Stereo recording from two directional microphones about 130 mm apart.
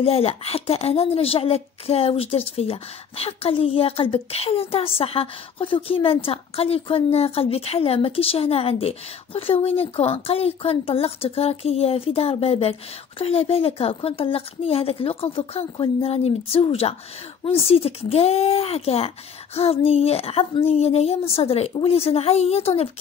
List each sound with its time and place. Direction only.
0.0 s a woman's voice: 50° left (ahead or behind)